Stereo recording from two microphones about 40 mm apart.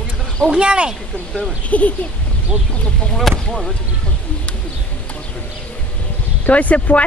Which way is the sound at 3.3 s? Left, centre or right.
Centre.